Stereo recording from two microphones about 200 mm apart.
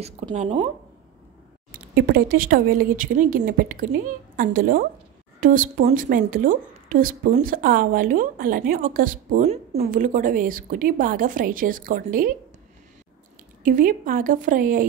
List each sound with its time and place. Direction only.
0.0 s speech: 30° right (ahead or behind)
1.7 s a woman's voice: 45° right (ahead or behind)
13.6 s a woman's voice: 40° right (ahead or behind)